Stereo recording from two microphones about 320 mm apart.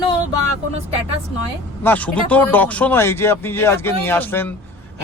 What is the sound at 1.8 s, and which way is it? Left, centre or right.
Speech, centre.